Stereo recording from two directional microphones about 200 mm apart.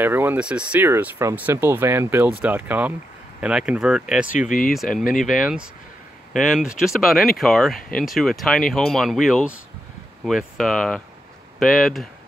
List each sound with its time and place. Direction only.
0.0 s speech: 10° right (ahead or behind)
4.3 s speech: 40° left (ahead or behind)
4.7 s speech: centre (ahead or behind)